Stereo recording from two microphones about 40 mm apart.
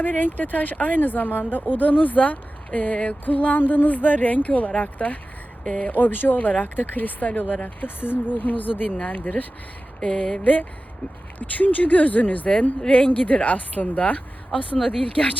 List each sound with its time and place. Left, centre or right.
0.0 s speech: left
3.2 s speech: left
7.9 s speech: left
8.4 s speech: left
10.0 s a sound: left
10.4 s a woman's voice: left